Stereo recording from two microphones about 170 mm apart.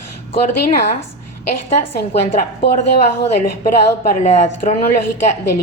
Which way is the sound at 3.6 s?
50° left (ahead or behind).